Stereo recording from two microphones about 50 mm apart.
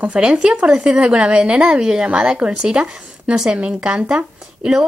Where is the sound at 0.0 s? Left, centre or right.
Centre.